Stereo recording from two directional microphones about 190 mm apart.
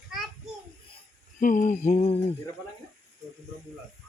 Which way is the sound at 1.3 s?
45° left (ahead or behind).